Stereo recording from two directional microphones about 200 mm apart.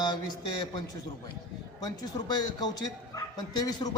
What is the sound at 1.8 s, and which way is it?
A man's voice, 20° left (ahead or behind).